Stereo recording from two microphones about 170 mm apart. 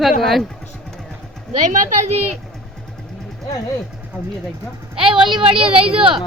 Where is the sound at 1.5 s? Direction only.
45° right (ahead or behind).